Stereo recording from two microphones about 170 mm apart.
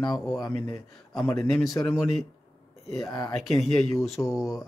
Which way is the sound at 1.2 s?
5° left (ahead or behind).